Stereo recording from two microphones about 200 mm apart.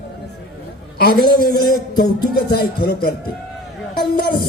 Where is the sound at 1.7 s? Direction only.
20° left (ahead or behind).